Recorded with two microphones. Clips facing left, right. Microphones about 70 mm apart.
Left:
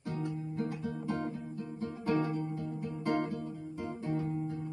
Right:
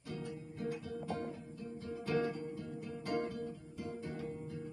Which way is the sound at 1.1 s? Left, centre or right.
Left.